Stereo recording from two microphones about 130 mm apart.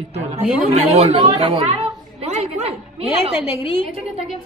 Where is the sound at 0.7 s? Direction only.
50° right (ahead or behind).